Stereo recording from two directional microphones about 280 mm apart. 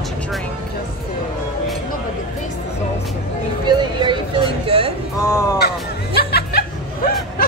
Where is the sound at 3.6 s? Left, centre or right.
Centre.